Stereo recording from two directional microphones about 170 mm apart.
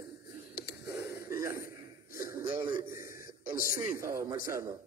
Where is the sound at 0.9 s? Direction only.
20° right (ahead or behind).